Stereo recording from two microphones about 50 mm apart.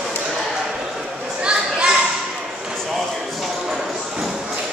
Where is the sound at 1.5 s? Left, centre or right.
Centre.